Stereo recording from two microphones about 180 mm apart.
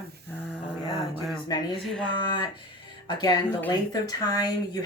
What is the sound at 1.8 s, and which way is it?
Speech, 5° left (ahead or behind).